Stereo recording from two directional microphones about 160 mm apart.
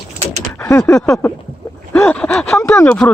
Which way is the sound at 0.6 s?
15° left (ahead or behind).